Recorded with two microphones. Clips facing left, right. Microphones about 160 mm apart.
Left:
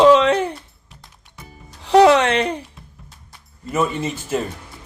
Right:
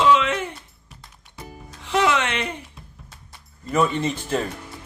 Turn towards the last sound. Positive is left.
turn(degrees=5)  # may be behind; listen again after turning